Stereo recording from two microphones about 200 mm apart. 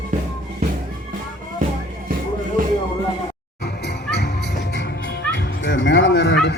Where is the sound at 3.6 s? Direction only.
55° left (ahead or behind).